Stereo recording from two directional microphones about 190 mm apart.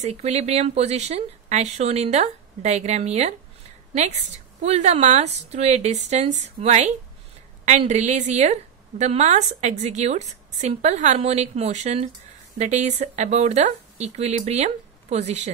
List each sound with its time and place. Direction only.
0.0 s a woman's voice: 35° right (ahead or behind)